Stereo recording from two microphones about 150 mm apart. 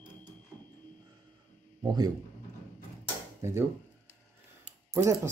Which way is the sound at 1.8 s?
25° right (ahead or behind).